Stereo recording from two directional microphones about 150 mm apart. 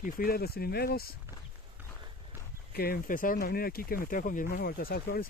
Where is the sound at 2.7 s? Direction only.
90° left.